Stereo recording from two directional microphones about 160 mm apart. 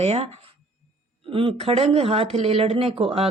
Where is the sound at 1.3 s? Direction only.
35° right (ahead or behind).